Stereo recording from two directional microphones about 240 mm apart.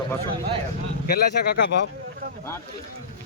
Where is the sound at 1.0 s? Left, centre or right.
Left.